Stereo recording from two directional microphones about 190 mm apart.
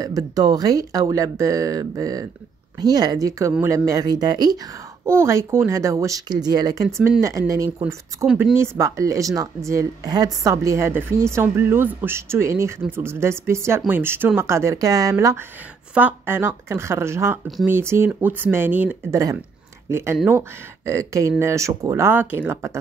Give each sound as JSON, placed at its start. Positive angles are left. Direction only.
{"t": 0.0, "sound": "a woman's voice", "side_deg": -20}